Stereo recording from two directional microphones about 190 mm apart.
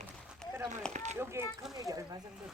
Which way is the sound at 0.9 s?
40° right (ahead or behind).